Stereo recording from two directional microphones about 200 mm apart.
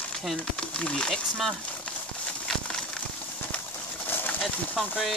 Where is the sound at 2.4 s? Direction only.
5° left (ahead or behind).